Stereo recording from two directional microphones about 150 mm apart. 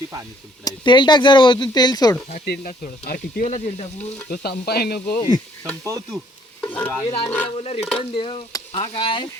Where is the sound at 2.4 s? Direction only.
80° left; by 3.6 s 65° left (ahead or behind).